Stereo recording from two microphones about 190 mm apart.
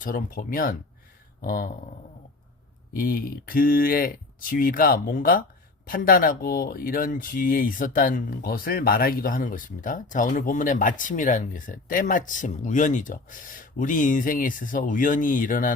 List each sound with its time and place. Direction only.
0.0 s speech: 50° left (ahead or behind)
1.4 s a sound: 50° left (ahead or behind)
2.9 s speech: 50° left (ahead or behind)